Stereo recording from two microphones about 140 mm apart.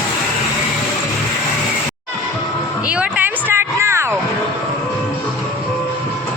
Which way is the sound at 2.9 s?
10° right (ahead or behind).